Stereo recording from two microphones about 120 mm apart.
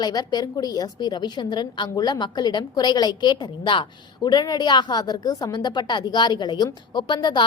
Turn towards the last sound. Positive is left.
turn(degrees=40)  # may be behind; listen again after turning